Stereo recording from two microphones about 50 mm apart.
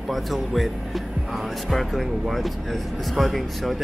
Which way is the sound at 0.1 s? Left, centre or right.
Centre.